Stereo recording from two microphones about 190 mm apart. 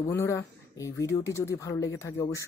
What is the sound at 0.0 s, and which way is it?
Speech, 15° left (ahead or behind).